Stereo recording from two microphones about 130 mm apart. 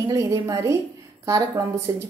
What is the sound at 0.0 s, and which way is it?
Speech, 25° right (ahead or behind).